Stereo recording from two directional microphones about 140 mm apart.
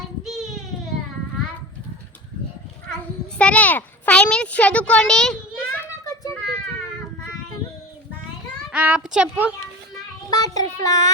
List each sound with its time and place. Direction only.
0.3 s child singing: centre (ahead or behind)
2.9 s a sound: 10° left (ahead or behind)
8.7 s a woman's voice: 10° right (ahead or behind)
9.9 s child singing: 25° left (ahead or behind)